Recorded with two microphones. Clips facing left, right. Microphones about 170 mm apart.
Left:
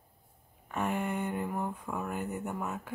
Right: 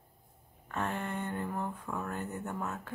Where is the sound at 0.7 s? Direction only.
10° left (ahead or behind).